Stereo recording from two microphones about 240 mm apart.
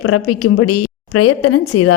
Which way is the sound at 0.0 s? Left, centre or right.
Left.